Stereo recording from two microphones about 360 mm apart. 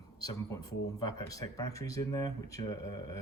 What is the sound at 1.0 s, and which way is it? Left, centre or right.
Speech, centre.